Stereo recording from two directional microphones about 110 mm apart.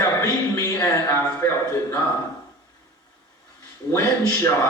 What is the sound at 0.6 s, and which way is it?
A man's voice, 30° left (ahead or behind).